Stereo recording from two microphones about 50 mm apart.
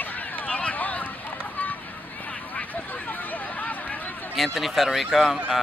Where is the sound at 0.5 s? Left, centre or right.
Left.